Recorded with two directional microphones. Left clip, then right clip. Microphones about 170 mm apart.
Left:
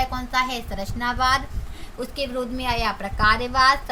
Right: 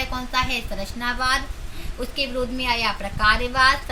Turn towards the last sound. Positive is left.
turn(degrees=90)